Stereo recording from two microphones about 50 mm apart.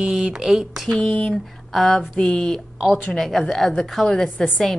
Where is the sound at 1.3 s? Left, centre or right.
Centre.